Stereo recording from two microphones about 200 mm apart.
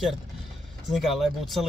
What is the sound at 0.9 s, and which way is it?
Speech, centre (ahead or behind).